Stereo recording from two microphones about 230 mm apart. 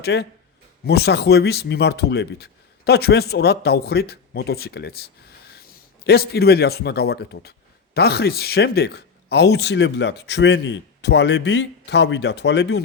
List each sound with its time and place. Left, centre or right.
0.0 s a man's voice: left